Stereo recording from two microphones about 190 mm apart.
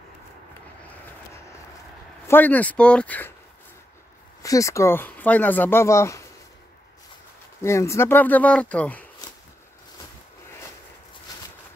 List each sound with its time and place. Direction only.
2.2 s speech: 10° left (ahead or behind)
4.4 s speech: 15° left (ahead or behind)
7.6 s speech: 15° left (ahead or behind)
11.3 s a sound: 20° left (ahead or behind)